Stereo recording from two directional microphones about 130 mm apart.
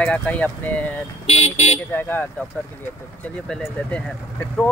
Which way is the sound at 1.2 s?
55° left (ahead or behind).